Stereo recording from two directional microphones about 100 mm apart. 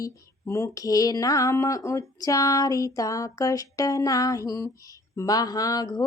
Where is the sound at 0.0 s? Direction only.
30° left (ahead or behind).